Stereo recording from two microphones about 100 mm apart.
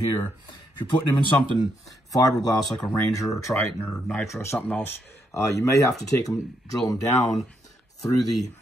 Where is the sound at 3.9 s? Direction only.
5° left (ahead or behind).